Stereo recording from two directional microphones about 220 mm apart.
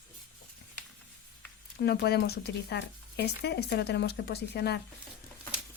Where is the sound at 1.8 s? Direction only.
45° left (ahead or behind).